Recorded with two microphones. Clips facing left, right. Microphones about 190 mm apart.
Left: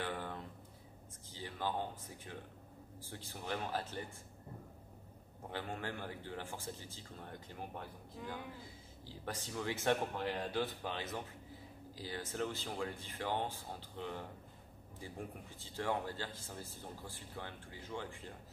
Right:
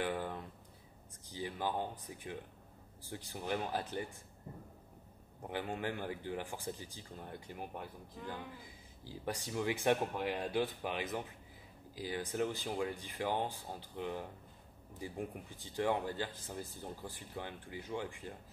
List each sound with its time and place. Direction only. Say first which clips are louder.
0.0 s a sound: right 4 dB; 15° right (ahead or behind)
1.3 s speech: right 2 dB; 15° right (ahead or behind)
5.5 s speech: right 4 dB; 15° right (ahead or behind)